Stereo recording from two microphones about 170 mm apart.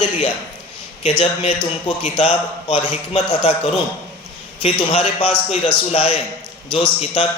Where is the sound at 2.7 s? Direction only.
35° left (ahead or behind).